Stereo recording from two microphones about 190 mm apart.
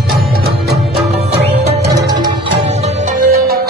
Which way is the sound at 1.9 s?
20° right (ahead or behind).